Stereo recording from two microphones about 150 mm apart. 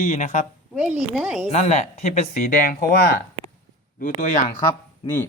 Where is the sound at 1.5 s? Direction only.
50° left (ahead or behind).